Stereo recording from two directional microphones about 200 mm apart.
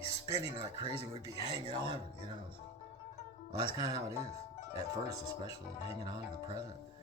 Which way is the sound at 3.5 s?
15° right (ahead or behind).